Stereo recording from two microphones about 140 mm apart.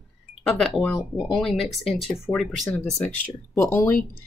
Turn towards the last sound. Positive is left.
turn(degrees=15)  # may be behind; listen again after turning